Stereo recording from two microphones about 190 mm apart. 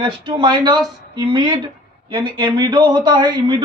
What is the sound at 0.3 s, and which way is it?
Speech, 25° right (ahead or behind).